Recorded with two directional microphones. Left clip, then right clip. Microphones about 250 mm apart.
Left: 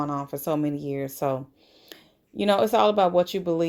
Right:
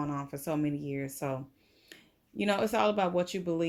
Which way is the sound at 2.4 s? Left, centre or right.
Centre.